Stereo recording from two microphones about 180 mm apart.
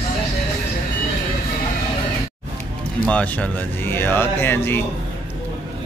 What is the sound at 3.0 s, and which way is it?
Speech, 5° left (ahead or behind).